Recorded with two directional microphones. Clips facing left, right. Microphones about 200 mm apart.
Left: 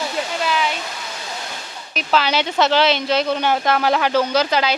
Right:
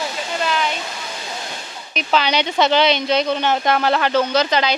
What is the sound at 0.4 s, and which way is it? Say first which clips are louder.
Waterfall: right 1 dB; 5° left (ahead or behind).